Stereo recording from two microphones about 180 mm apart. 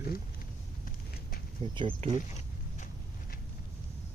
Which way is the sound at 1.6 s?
25° right (ahead or behind).